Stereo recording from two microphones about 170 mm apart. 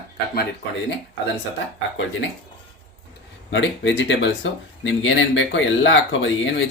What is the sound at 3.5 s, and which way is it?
Speech, 90° left.